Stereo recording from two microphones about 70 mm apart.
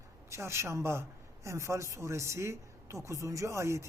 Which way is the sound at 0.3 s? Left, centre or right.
Right.